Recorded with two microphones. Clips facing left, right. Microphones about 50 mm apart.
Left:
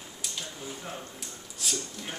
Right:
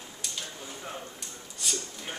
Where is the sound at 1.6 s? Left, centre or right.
Centre.